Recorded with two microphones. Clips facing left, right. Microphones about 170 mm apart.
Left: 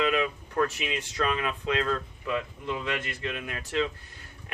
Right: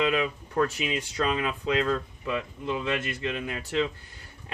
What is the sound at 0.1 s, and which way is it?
Speech, 25° right (ahead or behind).